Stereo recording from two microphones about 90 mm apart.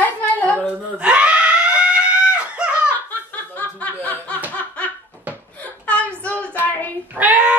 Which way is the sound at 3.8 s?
15° left (ahead or behind).